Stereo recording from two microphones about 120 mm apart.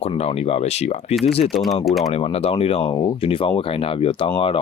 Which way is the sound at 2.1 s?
55° left (ahead or behind).